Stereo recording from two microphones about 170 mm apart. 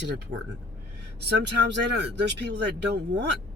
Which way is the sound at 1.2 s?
80° right.